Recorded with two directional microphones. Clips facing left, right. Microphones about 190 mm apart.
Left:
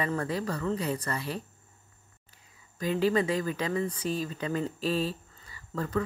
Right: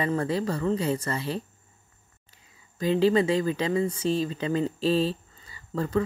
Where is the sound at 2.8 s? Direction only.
25° right (ahead or behind).